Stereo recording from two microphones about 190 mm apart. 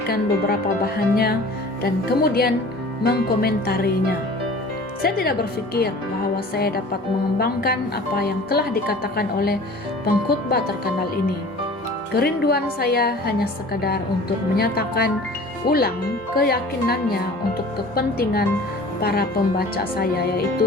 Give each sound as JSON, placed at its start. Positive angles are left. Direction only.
{"t": 0.1, "sound": "a woman's voice", "side_deg": 55}
{"t": 5.0, "sound": "a woman's voice", "side_deg": 55}
{"t": 12.1, "sound": "a woman's voice", "side_deg": 55}